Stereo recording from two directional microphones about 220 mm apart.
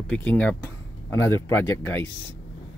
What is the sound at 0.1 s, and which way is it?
Speech, 5° left (ahead or behind).